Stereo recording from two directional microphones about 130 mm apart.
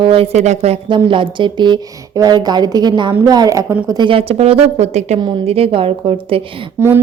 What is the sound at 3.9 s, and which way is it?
A woman's voice, 40° right (ahead or behind).